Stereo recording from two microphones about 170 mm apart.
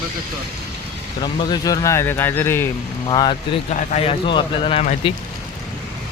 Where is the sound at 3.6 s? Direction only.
40° left (ahead or behind).